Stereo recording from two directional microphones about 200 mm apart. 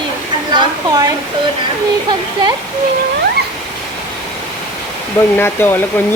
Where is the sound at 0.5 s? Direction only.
20° right (ahead or behind).